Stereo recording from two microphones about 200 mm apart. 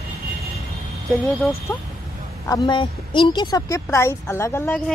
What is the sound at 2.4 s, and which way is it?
A woman's voice, 20° left (ahead or behind).